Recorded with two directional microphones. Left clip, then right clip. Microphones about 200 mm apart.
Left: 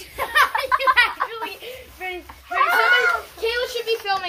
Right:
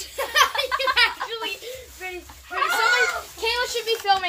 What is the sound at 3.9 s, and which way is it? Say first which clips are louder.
Speech: right 4 dB; 35° right (ahead or behind).